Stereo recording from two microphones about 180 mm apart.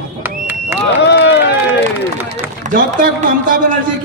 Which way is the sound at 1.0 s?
70° left (ahead or behind).